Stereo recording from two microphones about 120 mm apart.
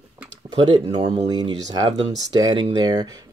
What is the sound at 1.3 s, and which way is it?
Speech, 35° right (ahead or behind).